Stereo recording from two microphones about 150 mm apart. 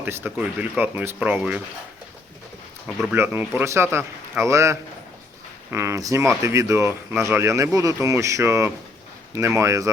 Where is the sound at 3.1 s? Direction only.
15° right (ahead or behind).